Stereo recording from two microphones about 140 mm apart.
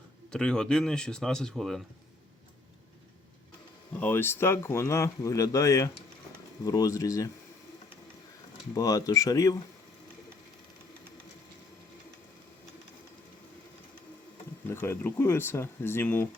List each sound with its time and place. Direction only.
0.3 s speech: 5° left (ahead or behind)
4.0 s speech: 15° left (ahead or behind)
8.7 s speech: 25° left (ahead or behind)
14.7 s speech: 15° left (ahead or behind)